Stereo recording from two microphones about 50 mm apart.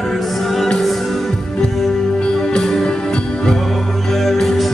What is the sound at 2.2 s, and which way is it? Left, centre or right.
Music, left.